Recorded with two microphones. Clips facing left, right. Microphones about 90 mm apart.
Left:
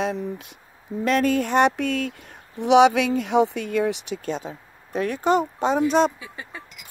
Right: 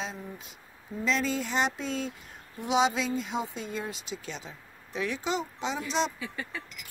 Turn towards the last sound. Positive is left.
turn(degrees=15)  # may be behind; listen again after turning